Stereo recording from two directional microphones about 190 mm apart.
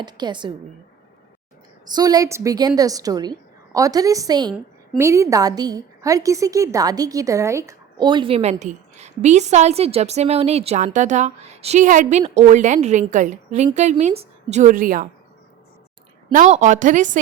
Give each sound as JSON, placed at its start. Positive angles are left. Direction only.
{"t": 0.0, "sound": "a woman's voice", "side_deg": -25}
{"t": 1.9, "sound": "a woman's voice", "side_deg": -20}
{"t": 16.3, "sound": "a woman's voice", "side_deg": -40}